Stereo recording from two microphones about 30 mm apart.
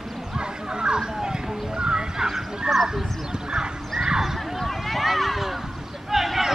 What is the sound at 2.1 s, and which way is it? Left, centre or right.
Goose, centre.